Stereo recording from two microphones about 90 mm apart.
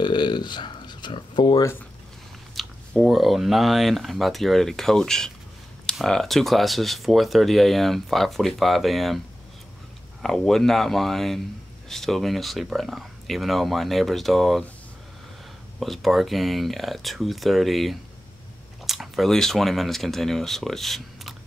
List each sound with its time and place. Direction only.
0.0 s a sound: 55° left (ahead or behind)
2.5 s speech: centre (ahead or behind)
10.2 s speech: 5° left (ahead or behind)
15.8 s speech: centre (ahead or behind)